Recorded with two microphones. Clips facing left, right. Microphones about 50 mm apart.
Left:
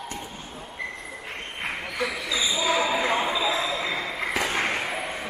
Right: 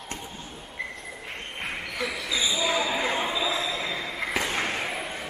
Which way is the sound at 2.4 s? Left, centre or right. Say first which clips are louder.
Left 2 dB; left.